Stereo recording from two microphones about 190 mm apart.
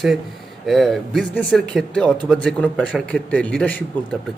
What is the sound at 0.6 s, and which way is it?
A man's voice, centre (ahead or behind).